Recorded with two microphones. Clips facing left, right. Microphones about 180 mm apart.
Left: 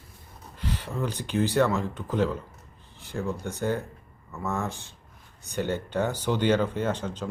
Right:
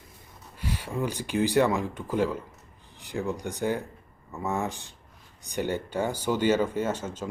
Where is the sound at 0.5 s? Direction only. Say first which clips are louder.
Right 1 dB; 10° right (ahead or behind).